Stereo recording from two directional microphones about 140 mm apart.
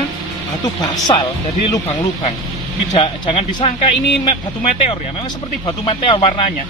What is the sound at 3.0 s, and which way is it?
Speech, 35° left (ahead or behind).